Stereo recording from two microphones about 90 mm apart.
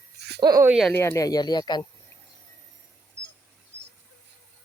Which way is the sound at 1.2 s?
50° left (ahead or behind).